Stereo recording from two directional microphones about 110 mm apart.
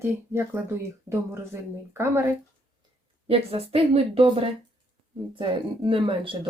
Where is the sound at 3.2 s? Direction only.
60° right (ahead or behind).